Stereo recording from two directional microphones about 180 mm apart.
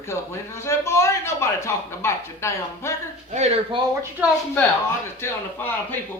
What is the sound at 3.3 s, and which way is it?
Speech, 40° right (ahead or behind).